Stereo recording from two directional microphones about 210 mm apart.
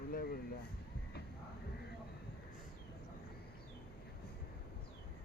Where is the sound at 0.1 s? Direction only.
45° left (ahead or behind).